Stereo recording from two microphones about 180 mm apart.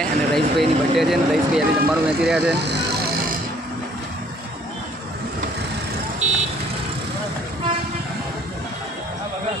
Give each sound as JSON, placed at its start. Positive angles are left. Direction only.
{"t": 0.0, "sound": "speech", "side_deg": 0}
{"t": 2.6, "sound": "vehicle", "side_deg": -70}